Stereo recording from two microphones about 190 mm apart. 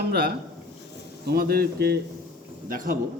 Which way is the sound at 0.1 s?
55° right (ahead or behind).